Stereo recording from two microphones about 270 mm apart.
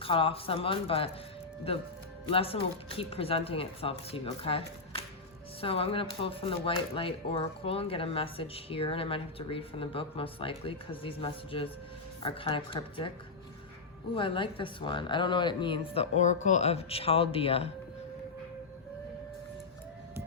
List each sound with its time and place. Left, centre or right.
0.0 s speech: centre
14.2 s speech: centre